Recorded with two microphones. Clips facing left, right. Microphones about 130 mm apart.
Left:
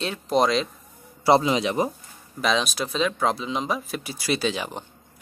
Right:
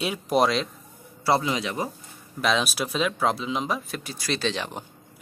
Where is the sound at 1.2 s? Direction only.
20° left (ahead or behind).